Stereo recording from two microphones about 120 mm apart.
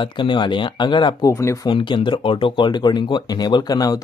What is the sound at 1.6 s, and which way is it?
Speech, 45° left (ahead or behind).